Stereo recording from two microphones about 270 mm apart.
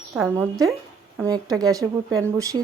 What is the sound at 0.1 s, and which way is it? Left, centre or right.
Speech, centre.